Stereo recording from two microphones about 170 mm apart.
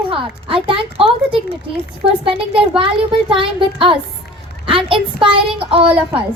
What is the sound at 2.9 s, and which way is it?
A woman's voice, 30° right (ahead or behind).